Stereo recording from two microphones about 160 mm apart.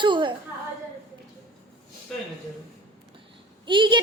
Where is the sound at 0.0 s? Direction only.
30° right (ahead or behind).